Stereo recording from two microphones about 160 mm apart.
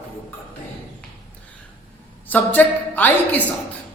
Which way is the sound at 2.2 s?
10° left (ahead or behind).